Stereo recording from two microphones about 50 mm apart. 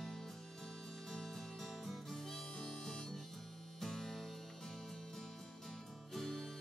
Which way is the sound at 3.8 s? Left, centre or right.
Centre.